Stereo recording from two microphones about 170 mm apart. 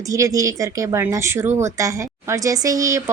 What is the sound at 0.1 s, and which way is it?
Speech, 20° right (ahead or behind).